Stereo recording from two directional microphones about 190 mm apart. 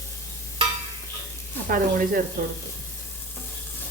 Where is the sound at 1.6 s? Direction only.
45° right (ahead or behind).